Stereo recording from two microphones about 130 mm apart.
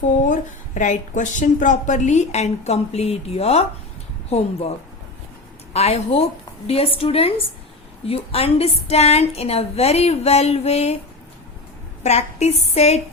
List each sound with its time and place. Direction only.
0.0 s a woman's voice: 75° left (ahead or behind); by 3.7 s 55° left (ahead or behind)
5.7 s a woman's voice: 55° left (ahead or behind)
12.0 s a woman's voice: 60° left (ahead or behind)